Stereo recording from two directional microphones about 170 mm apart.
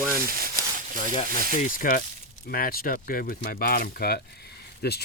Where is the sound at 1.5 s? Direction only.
50° left (ahead or behind).